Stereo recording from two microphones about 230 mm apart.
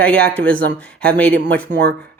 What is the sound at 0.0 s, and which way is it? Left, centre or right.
Speech, centre.